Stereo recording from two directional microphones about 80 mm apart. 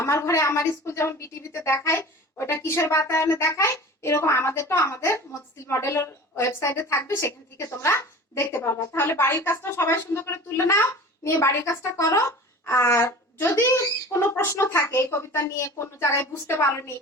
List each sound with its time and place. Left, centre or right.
0.0 s a woman's voice: left